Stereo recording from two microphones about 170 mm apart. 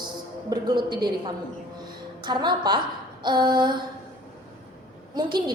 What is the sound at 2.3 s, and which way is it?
A woman's voice, 25° right (ahead or behind).